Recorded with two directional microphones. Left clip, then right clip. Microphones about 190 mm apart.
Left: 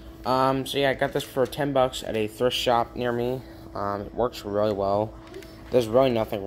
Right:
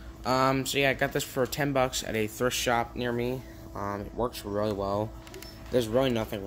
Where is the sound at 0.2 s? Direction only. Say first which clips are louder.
Left 3 dB; 15° right (ahead or behind).